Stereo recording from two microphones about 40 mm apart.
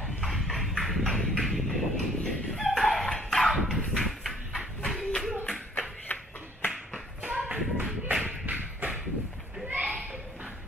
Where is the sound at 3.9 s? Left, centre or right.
Centre.